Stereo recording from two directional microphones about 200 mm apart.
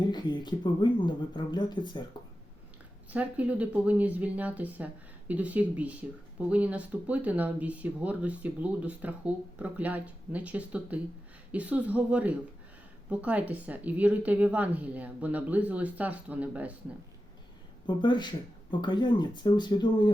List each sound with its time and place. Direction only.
0.1 s speech: 20° left (ahead or behind)
3.1 s speech: 5° right (ahead or behind)
17.8 s speech: 20° left (ahead or behind)